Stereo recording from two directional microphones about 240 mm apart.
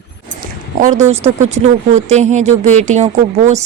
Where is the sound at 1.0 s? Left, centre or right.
Right.